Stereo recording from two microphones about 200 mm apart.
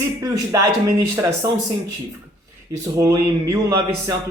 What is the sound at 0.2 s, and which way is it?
Speech, 15° right (ahead or behind).